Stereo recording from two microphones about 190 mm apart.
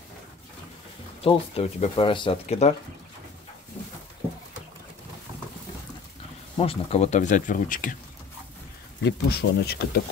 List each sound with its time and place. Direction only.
1.2 s speech: 30° left (ahead or behind)
6.6 s speech: 30° left (ahead or behind)
9.0 s speech: 60° left (ahead or behind)